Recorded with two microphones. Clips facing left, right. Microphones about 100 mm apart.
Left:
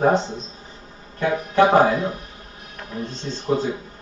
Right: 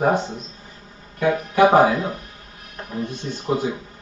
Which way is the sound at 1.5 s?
10° right (ahead or behind).